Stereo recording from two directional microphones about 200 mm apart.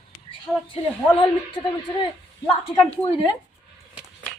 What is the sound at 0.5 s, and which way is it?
Speech, centre (ahead or behind).